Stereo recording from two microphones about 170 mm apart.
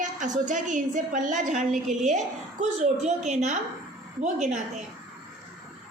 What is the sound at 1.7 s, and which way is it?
Speech, centre (ahead or behind).